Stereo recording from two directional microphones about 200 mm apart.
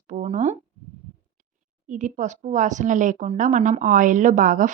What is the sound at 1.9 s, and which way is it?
A woman's voice, 40° right (ahead or behind).